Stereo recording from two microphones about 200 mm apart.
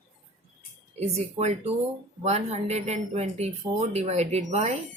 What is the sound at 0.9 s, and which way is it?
Speech, 35° right (ahead or behind).